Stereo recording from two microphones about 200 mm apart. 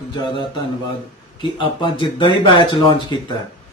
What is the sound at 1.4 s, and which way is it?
Speech, 25° left (ahead or behind).